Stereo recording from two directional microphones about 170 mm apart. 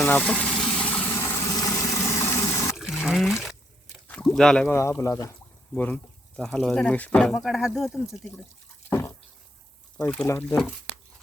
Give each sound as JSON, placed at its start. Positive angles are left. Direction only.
{"t": 0.0, "sound": "gush", "side_deg": 5}
{"t": 2.7, "sound": "pour", "side_deg": 0}
{"t": 4.1, "sound": "speech", "side_deg": 5}
{"t": 4.7, "sound": "speech", "side_deg": 15}
{"t": 8.9, "sound": "drip", "side_deg": 15}
{"t": 10.5, "sound": "speech", "side_deg": 0}